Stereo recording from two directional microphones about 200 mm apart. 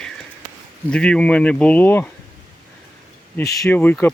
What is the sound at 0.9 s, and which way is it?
Speech, 5° left (ahead or behind).